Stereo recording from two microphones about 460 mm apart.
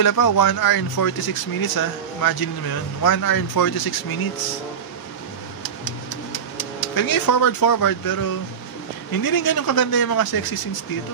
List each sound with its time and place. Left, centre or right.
0.0 s speech: left
5.6 s a sound: left
9.1 s speech: left